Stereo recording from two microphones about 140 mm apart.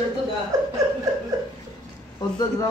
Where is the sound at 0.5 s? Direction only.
25° right (ahead or behind).